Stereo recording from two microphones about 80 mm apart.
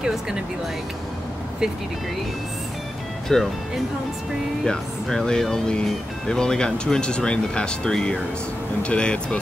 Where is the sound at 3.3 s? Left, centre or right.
Centre.